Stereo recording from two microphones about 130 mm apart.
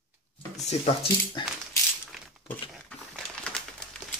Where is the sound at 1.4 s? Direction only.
40° left (ahead or behind).